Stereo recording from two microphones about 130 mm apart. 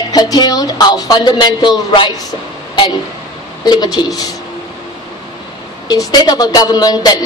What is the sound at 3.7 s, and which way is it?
Speech, 30° left (ahead or behind).